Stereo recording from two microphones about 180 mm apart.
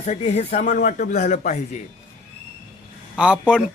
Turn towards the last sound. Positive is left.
turn(degrees=-5)  # may be behind; listen again after turning